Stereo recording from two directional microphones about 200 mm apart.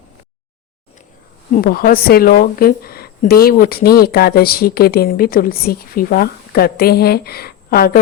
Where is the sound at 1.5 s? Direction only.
45° left (ahead or behind).